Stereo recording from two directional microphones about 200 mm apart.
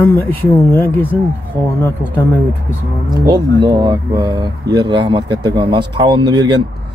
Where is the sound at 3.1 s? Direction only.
20° right (ahead or behind).